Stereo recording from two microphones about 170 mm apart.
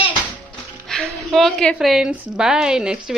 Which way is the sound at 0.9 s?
Centre (ahead or behind).